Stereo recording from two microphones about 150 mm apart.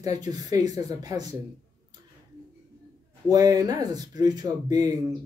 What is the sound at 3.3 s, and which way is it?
Speech, 25° right (ahead or behind).